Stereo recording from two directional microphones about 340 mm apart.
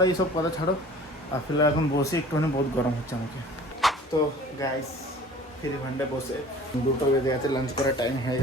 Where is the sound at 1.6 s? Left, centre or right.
Centre.